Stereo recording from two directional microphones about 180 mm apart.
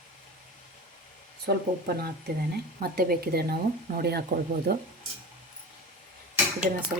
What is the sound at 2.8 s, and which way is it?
Speech, 60° right (ahead or behind).